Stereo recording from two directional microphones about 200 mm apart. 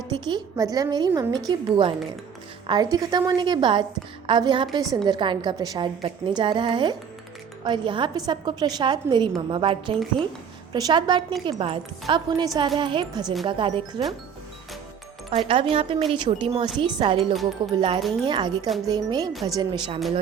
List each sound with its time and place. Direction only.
0.1 s a woman's voice: 20° right (ahead or behind)
15.4 s a woman's voice: 30° right (ahead or behind)
19.3 s speech: centre (ahead or behind)
19.5 s a woman's voice: 20° right (ahead or behind)